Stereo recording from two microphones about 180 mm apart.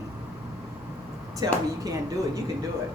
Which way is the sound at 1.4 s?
20° right (ahead or behind).